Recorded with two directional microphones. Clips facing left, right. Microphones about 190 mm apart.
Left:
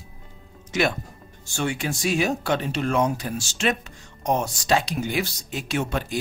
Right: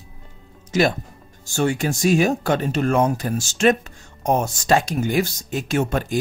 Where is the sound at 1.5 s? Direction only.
45° right (ahead or behind).